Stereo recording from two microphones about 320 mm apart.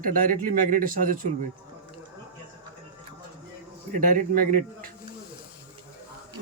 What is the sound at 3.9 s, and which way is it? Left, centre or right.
Speech, right.